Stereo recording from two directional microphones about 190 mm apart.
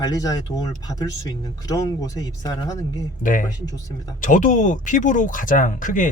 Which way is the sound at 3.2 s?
45° left (ahead or behind).